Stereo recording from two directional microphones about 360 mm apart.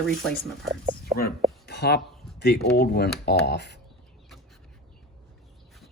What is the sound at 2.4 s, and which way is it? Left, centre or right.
Speech, left.